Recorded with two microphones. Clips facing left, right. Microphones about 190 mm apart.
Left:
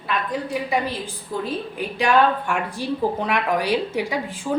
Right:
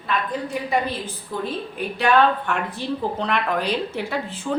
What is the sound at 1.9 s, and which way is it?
A woman's voice, 10° left (ahead or behind).